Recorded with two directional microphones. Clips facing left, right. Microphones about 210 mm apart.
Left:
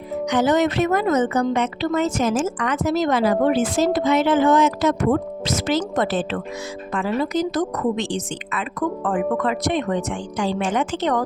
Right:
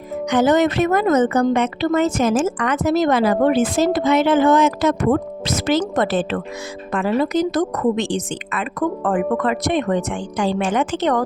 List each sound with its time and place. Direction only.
0.3 s a woman's voice: 50° right (ahead or behind)